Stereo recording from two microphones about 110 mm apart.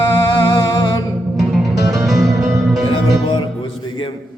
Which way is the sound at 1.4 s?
Centre (ahead or behind).